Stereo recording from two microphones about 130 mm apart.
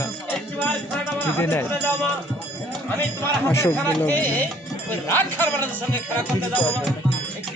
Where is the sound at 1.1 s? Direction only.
15° left (ahead or behind).